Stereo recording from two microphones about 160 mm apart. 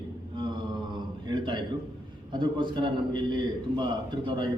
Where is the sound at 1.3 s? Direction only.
30° right (ahead or behind).